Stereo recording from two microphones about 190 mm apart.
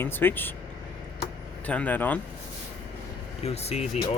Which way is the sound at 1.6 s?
5° left (ahead or behind).